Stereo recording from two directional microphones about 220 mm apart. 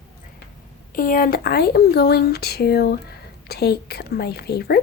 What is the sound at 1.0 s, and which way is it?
Speech, 40° left (ahead or behind).